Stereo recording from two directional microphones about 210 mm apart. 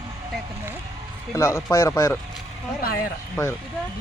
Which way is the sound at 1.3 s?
10° left (ahead or behind).